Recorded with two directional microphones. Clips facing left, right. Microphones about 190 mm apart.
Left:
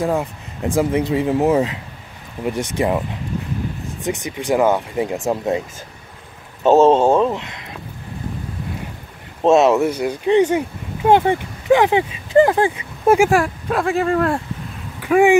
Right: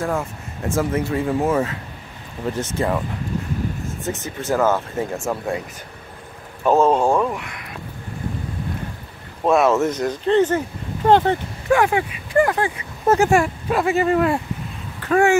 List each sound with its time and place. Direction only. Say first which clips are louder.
0.0 s speech: left 4 dB; 15° left (ahead or behind)
4.0 s speech: left 5 dB; 15° left (ahead or behind)
6.6 s speech: left 4 dB; 25° left (ahead or behind)
9.4 s speech: left 3 dB; 25° left (ahead or behind)
9.8 s speech: left 2 dB; 10° left (ahead or behind); by 12.8 s 25° left (ahead or behind)
13.0 s speech: left 3 dB; 10° left (ahead or behind)
13.3 s speech: even; centre (ahead or behind)
15.0 s a sound: left 3 dB; 15° left (ahead or behind)